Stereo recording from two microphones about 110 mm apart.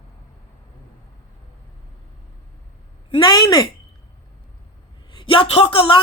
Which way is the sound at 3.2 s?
35° left (ahead or behind).